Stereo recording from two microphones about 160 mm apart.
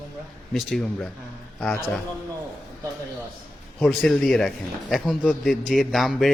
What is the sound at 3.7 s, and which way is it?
A man's voice, centre (ahead or behind).